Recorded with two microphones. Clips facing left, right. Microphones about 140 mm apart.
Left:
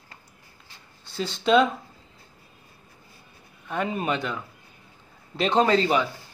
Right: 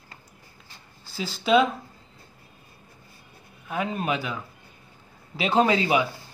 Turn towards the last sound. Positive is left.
turn(degrees=-10)  # may be behind; listen again after turning